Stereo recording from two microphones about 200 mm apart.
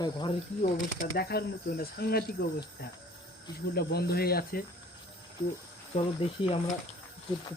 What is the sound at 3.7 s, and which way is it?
Speech, 50° left (ahead or behind).